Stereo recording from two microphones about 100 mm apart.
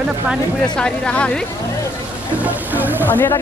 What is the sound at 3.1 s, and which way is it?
Speech, 20° left (ahead or behind).